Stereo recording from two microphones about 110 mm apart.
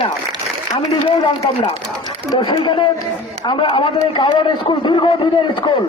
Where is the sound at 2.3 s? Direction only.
40° left (ahead or behind).